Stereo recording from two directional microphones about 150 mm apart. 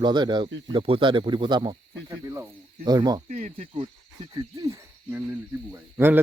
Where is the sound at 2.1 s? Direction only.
20° right (ahead or behind).